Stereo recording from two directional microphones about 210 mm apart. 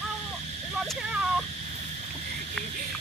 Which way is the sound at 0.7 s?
Centre (ahead or behind).